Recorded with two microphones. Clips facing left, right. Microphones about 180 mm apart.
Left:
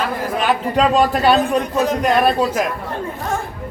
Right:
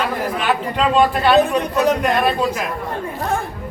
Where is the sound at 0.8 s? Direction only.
40° left (ahead or behind).